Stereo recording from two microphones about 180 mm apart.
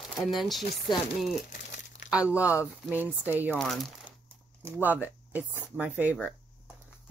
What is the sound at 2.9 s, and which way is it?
Speech, 10° right (ahead or behind).